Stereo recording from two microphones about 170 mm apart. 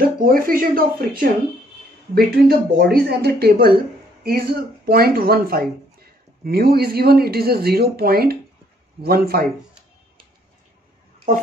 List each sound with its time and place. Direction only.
0.2 s speech: 60° right (ahead or behind)